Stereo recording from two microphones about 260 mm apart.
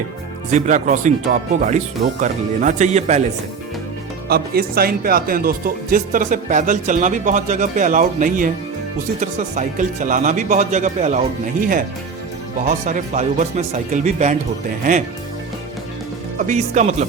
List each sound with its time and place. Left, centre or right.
0.5 s speech: right
4.3 s speech: right
12.6 s speech: right
16.5 s speech: right